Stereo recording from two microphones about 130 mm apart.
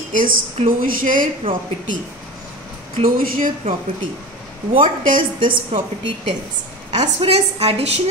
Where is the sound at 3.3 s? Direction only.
90° right.